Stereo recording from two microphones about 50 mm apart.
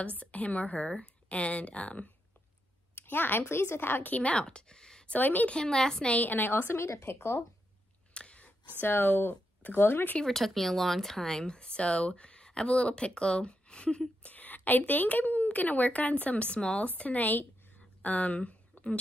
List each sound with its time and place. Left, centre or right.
0.1 s speech: left
2.9 s a woman's voice: left; by 5.0 s centre
5.0 s a woman's voice: left
5.5 s speech: centre
6.0 s a woman's voice: left
6.9 s speech: left
8.1 s whispering: left
8.8 s speech: left
10.2 s speech: centre
14.3 s a woman's voice: left